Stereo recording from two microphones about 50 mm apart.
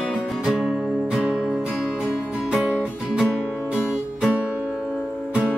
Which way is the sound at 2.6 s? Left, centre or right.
Centre.